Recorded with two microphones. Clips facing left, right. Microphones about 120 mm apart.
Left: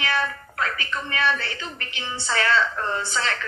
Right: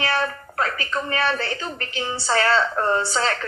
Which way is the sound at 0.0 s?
35° right (ahead or behind).